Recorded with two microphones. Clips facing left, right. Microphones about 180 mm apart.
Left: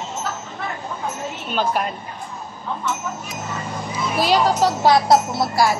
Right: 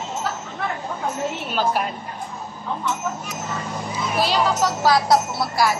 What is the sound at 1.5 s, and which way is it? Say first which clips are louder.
Speech: left 2 dB; 5° right (ahead or behind).